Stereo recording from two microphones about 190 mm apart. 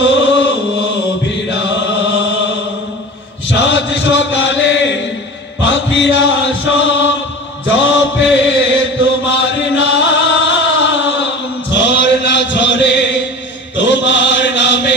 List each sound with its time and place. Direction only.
0.0 s chant: 70° left (ahead or behind)
1.5 s chant: 70° left (ahead or behind)